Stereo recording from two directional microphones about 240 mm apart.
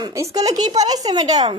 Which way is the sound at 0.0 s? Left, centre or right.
Centre.